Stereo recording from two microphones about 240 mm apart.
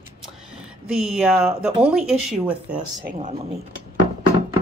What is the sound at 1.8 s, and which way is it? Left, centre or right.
Speech, centre.